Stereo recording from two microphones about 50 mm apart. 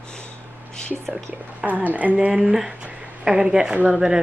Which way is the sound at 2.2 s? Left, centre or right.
Right.